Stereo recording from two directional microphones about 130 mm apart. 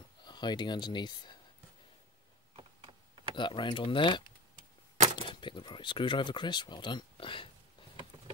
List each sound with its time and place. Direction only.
0.2 s speech: 35° left (ahead or behind)
2.5 s a sound: 40° right (ahead or behind)
3.3 s speech: 35° left (ahead or behind)